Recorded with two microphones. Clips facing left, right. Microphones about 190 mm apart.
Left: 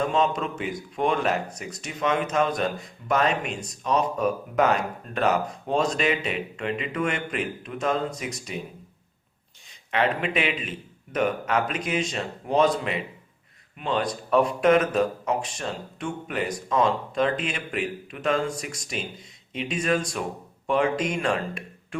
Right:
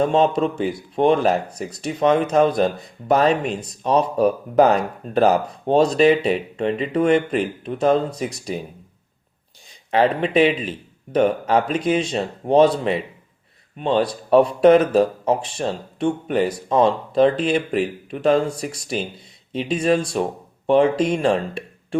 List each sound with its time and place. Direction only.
0.0 s speech: 30° right (ahead or behind)
9.9 s speech: 35° right (ahead or behind)